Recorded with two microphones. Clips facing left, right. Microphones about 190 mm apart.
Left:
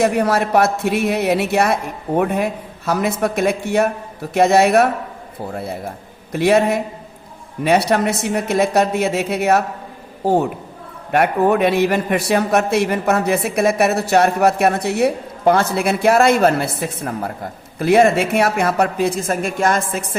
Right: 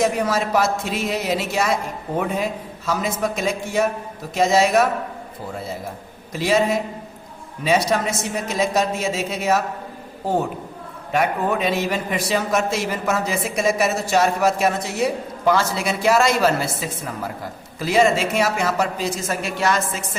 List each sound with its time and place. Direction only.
0.0 s a man's voice: 65° left (ahead or behind)
6.3 s a man's voice: 60° left (ahead or behind)
11.1 s a man's voice: 60° left (ahead or behind)